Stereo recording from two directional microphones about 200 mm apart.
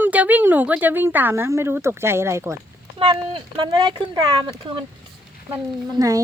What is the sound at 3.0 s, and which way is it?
Speech, 25° right (ahead or behind).